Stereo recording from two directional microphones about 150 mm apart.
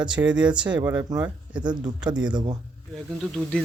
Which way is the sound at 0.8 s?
20° right (ahead or behind).